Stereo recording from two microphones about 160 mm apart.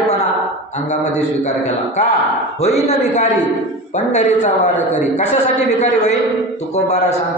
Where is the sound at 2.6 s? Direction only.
45° left (ahead or behind).